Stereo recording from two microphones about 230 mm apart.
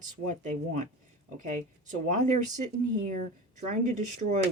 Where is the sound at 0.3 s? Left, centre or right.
Right.